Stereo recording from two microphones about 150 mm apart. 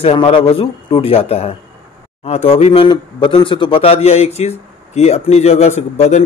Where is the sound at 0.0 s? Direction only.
40° left (ahead or behind).